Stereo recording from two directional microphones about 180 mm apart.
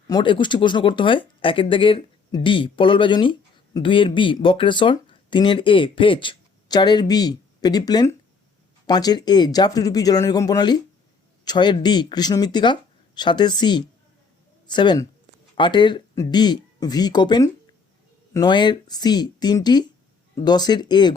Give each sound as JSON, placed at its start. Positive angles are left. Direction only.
{"t": 0.1, "sound": "speech", "side_deg": 25}